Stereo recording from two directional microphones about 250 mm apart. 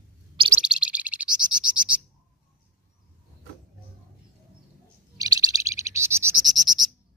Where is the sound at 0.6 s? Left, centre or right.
Centre.